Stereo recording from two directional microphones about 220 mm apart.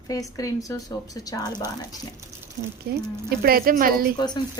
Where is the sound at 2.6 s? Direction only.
30° right (ahead or behind).